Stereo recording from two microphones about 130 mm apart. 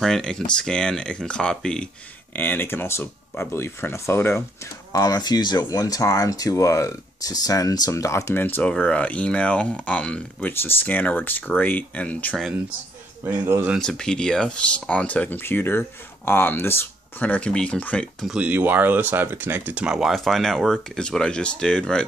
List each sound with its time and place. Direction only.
0.0 s speech: 5° left (ahead or behind)
4.9 s speech: 30° left (ahead or behind); by 12.4 s 10° left (ahead or behind)
13.2 s speech: 15° right (ahead or behind)
13.7 s speech: 5° left (ahead or behind)
18.2 s speech: 10° right (ahead or behind)